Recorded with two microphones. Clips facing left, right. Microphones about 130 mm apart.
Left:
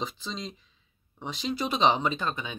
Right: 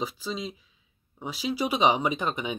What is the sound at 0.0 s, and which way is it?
Speech, 5° right (ahead or behind).